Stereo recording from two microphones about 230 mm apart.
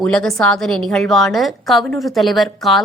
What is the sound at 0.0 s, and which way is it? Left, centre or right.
A woman's voice, centre.